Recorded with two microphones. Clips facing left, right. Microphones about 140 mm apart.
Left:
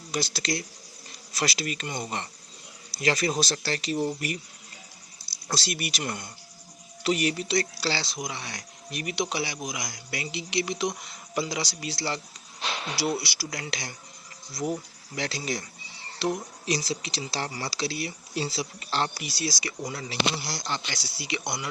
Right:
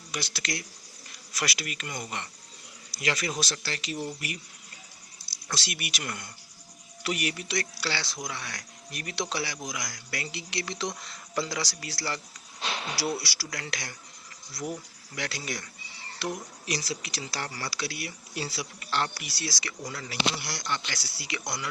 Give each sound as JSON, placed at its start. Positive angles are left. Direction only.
{"t": 0.1, "sound": "speech", "side_deg": 30}
{"t": 5.5, "sound": "speech", "side_deg": 35}